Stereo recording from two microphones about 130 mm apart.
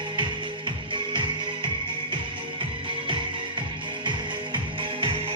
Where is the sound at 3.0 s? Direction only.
40° right (ahead or behind).